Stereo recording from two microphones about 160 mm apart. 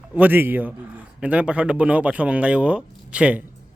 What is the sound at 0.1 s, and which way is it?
A man's voice, 10° right (ahead or behind).